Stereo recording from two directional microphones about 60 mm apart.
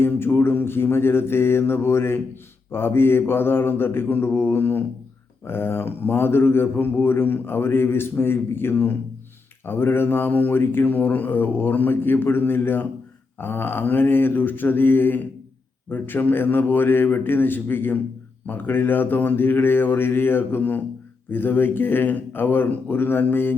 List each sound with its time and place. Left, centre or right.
0.0 s speech: left